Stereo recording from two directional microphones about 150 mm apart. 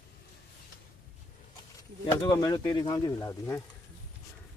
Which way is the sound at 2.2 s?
30° left (ahead or behind).